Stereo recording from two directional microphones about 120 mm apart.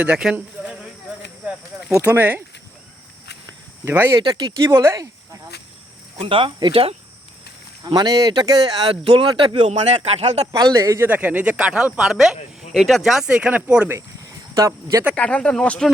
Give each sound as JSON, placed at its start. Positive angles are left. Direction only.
{"t": 0.0, "sound": "speech", "side_deg": -5}
{"t": 0.3, "sound": "a sound", "side_deg": -15}
{"t": 2.0, "sound": "speech", "side_deg": -15}
{"t": 3.8, "sound": "speech", "side_deg": -20}
{"t": 4.3, "sound": "speech", "side_deg": -40}
{"t": 4.6, "sound": "speech", "side_deg": -25}
{"t": 6.1, "sound": "speech", "side_deg": -45}
{"t": 7.9, "sound": "speech", "side_deg": -35}
{"t": 8.9, "sound": "speech", "side_deg": -50}
{"t": 10.4, "sound": "speech", "side_deg": -30}
{"t": 11.1, "sound": "speech", "side_deg": -15}
{"t": 14.5, "sound": "speech", "side_deg": -25}
{"t": 15.1, "sound": "speech", "side_deg": 10}